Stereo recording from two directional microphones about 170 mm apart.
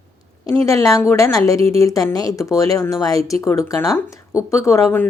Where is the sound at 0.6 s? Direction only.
20° left (ahead or behind).